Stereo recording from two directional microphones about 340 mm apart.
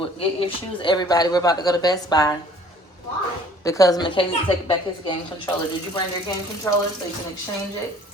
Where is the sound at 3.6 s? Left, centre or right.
Centre.